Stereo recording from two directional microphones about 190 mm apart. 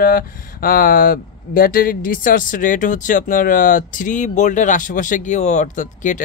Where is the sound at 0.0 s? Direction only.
50° left (ahead or behind).